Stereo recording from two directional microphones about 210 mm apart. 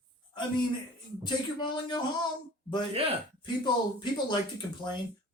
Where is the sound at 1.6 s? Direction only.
20° left (ahead or behind).